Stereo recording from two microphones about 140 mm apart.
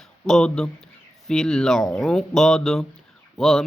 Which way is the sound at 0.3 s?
5° left (ahead or behind).